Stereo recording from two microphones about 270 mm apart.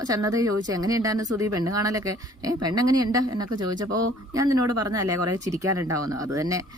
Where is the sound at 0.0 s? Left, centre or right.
Centre.